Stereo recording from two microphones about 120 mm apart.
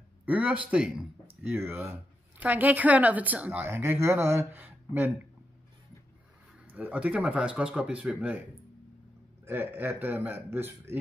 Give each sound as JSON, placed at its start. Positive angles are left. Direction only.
{"t": 0.2, "sound": "speech", "side_deg": -10}
{"t": 1.5, "sound": "speech", "side_deg": -20}
{"t": 6.7, "sound": "speech", "side_deg": -10}
{"t": 9.5, "sound": "speech", "side_deg": -15}